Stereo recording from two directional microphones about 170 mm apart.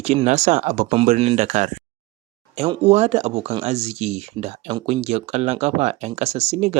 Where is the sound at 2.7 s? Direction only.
40° right (ahead or behind).